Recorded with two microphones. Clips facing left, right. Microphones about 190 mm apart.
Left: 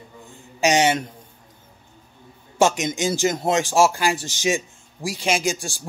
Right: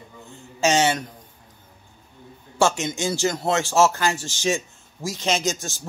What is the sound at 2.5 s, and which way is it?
Speech, 15° left (ahead or behind).